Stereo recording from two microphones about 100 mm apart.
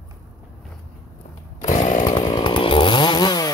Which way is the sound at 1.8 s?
45° left (ahead or behind).